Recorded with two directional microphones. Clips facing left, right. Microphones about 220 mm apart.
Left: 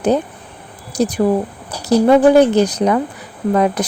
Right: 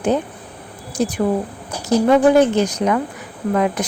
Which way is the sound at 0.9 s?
35° left (ahead or behind).